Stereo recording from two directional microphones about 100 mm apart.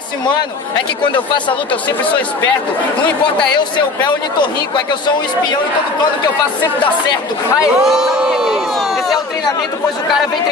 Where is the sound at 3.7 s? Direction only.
50° left (ahead or behind).